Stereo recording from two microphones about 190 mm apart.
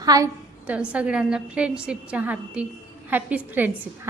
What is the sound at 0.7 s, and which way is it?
A woman's voice, 5° right (ahead or behind).